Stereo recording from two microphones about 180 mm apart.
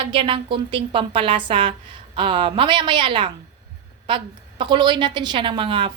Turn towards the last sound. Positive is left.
turn(degrees=-30)  # may be behind; listen again after turning